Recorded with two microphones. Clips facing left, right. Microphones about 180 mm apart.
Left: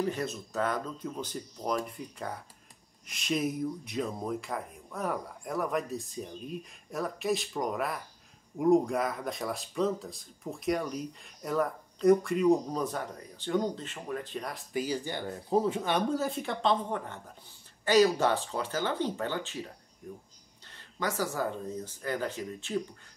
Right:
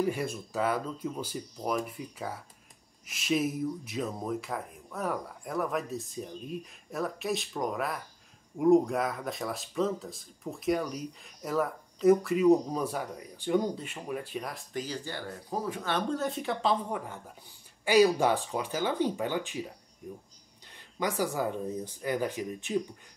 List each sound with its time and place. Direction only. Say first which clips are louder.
0.0 s speech: right 2 dB; 10° right (ahead or behind)
14.7 s speech: left 6 dB; 10° left (ahead or behind)
16.1 s speech: even; centre (ahead or behind); by 19.6 s 15° right (ahead or behind)
20.6 s speech: right 2 dB; 15° right (ahead or behind)